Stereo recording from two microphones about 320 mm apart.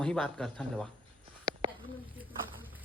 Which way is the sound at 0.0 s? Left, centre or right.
Centre.